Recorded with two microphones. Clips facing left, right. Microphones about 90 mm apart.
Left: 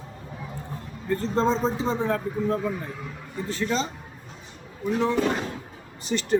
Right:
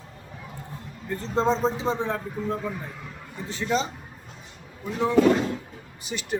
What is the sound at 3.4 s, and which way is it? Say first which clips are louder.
A man's voice: right 1 dB; 15° right (ahead or behind).